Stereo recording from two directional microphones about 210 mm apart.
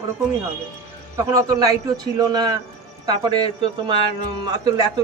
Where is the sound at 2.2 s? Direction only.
20° right (ahead or behind).